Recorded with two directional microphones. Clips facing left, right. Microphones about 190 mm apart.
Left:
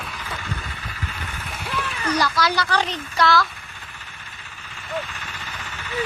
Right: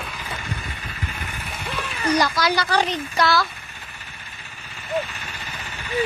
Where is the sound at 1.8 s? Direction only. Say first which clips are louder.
Right 3 dB; 15° right (ahead or behind).